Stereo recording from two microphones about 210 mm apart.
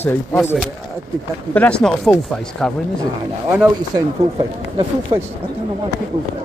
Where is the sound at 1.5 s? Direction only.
5° left (ahead or behind).